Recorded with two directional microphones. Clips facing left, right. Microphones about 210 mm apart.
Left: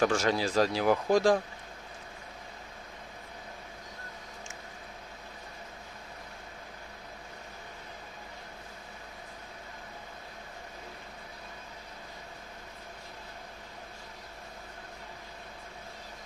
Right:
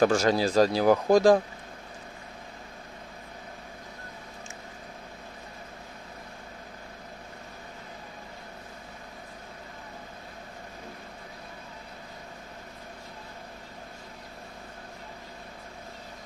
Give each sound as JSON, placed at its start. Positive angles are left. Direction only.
{"t": 0.0, "sound": "speech", "side_deg": -40}